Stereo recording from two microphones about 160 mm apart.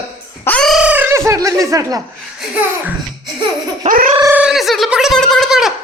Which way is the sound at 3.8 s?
60° right (ahead or behind).